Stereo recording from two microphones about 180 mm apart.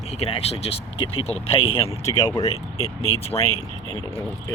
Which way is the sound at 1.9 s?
20° left (ahead or behind).